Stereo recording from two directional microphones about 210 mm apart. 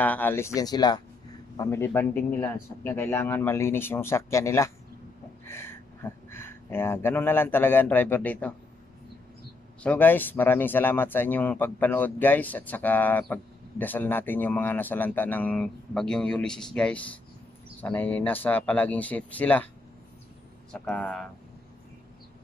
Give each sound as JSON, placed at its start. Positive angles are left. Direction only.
{"t": 0.0, "sound": "speech", "side_deg": 10}
{"t": 9.8, "sound": "speech", "side_deg": 10}
{"t": 20.7, "sound": "speech", "side_deg": 5}